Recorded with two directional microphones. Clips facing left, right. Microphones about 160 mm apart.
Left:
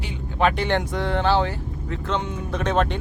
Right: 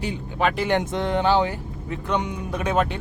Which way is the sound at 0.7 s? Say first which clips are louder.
Right 1 dB; 20° right (ahead or behind).